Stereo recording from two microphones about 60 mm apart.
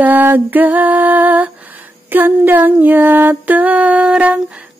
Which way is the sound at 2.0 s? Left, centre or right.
Right.